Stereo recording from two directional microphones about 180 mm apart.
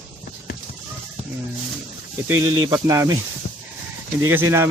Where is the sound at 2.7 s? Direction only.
15° right (ahead or behind).